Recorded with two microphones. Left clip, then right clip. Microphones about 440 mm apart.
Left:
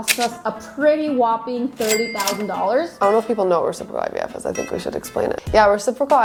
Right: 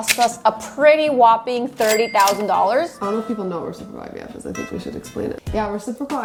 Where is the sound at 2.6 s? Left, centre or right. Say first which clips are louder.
Left 2 dB; right.